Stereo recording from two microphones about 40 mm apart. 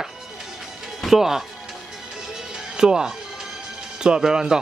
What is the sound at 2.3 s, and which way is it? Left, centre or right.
Music, centre.